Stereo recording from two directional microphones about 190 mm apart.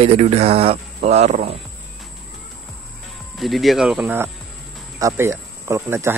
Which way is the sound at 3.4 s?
Centre (ahead or behind).